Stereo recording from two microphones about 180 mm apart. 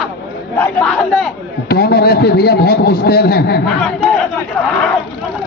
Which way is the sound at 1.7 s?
60° left (ahead or behind).